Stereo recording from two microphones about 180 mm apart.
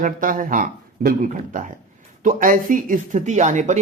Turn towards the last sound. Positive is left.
turn(degrees=-40)  # may be behind; listen again after turning